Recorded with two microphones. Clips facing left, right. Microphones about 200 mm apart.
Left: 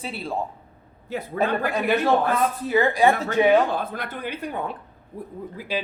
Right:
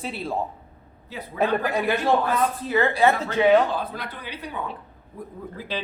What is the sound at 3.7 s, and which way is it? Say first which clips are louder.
Speech: left 1 dB; 50° left (ahead or behind).